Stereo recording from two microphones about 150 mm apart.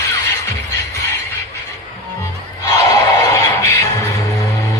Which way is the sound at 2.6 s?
25° left (ahead or behind).